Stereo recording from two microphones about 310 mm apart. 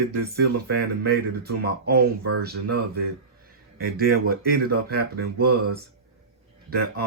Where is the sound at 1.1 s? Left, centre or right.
Right.